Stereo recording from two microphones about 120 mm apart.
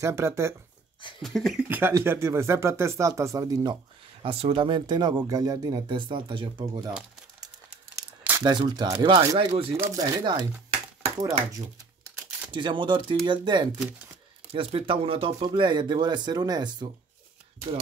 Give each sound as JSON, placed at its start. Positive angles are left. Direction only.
{"t": 0.0, "sound": "speech", "side_deg": -25}
{"t": 1.2, "sound": "speech", "side_deg": 0}
{"t": 1.7, "sound": "speech", "side_deg": -20}
{"t": 4.2, "sound": "speech", "side_deg": -50}
{"t": 8.2, "sound": "crumpling", "side_deg": -15}
{"t": 8.5, "sound": "speech", "side_deg": -35}
{"t": 10.2, "sound": "a sound", "side_deg": -40}
{"t": 12.4, "sound": "speech", "side_deg": -40}
{"t": 14.5, "sound": "speech", "side_deg": -50}
{"t": 15.4, "sound": "speech", "side_deg": -40}